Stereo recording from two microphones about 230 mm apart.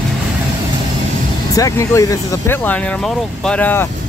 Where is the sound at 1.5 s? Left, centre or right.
Centre.